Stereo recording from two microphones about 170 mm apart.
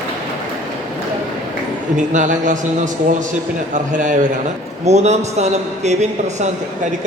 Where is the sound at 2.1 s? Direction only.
45° right (ahead or behind).